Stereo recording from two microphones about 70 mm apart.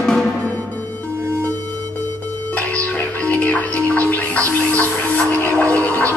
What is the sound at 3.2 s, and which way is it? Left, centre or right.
Music, left.